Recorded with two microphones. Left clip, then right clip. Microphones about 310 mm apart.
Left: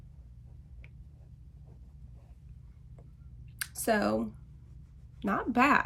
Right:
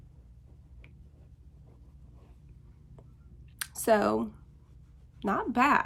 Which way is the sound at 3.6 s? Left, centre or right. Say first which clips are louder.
Right 4 dB; centre.